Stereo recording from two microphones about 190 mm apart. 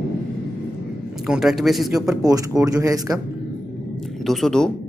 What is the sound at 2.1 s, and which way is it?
Speech, 20° right (ahead or behind).